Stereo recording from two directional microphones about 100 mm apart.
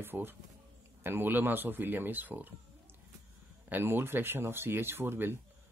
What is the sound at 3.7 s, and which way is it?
Speech, 20° right (ahead or behind).